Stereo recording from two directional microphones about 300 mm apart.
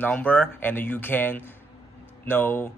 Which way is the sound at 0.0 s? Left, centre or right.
Centre.